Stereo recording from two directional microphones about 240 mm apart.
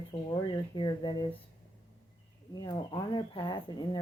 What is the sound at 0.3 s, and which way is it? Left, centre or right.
Speech, centre.